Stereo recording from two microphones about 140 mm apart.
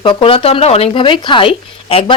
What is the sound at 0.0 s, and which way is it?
A woman's voice, 40° left (ahead or behind).